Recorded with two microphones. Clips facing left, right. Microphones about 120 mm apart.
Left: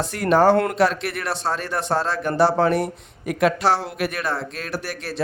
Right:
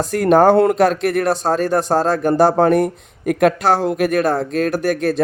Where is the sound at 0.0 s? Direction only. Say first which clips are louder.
Right 5 dB; 45° right (ahead or behind).